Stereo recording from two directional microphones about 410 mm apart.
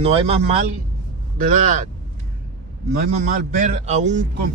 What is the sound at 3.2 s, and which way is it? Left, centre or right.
Speech, centre.